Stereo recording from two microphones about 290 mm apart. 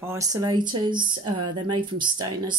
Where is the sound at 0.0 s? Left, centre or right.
Centre.